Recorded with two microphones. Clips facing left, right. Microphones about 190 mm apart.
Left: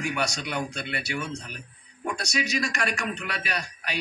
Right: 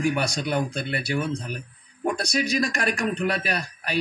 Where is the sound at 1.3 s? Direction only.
55° right (ahead or behind).